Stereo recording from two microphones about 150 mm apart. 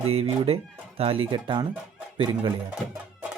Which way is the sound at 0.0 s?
40° right (ahead or behind).